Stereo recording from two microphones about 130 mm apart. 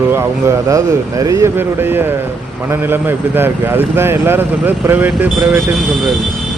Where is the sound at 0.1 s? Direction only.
20° right (ahead or behind).